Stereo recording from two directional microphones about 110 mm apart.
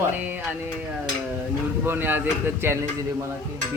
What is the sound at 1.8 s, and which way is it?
Speech, 20° right (ahead or behind).